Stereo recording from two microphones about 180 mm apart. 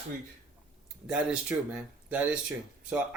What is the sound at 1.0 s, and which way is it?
Speech, 5° right (ahead or behind).